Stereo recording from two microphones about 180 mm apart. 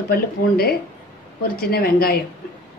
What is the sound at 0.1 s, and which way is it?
Speech, 60° left (ahead or behind).